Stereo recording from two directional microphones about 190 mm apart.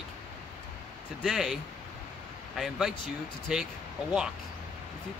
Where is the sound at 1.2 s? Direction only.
Centre (ahead or behind).